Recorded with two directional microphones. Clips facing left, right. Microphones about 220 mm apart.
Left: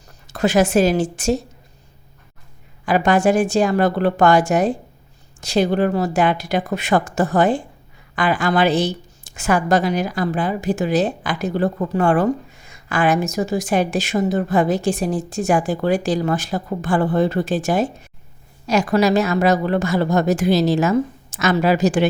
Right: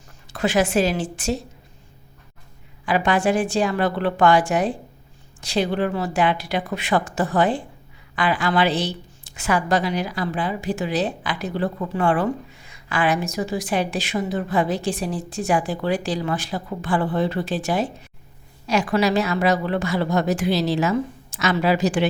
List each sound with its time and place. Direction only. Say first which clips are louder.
0.3 s a woman's voice: left 4 dB; 40° left (ahead or behind)
2.8 s a woman's voice: left 4 dB; 45° left (ahead or behind)